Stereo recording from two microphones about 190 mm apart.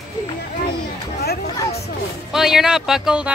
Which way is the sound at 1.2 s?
55° left (ahead or behind).